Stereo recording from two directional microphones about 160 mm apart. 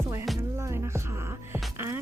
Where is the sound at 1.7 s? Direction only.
15° right (ahead or behind).